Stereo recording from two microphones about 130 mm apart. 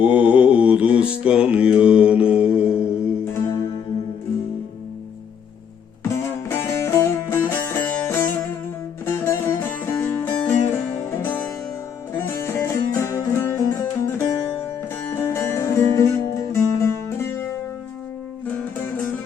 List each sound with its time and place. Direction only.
0.0 s mantra: 10° right (ahead or behind)
6.5 s music: 20° left (ahead or behind)
18.4 s music: 10° left (ahead or behind)